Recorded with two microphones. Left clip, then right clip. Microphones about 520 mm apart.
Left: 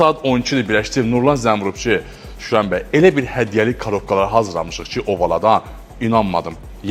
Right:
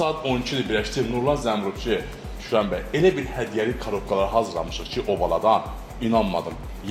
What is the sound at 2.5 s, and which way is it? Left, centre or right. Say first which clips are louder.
Speech: left 5 dB; left.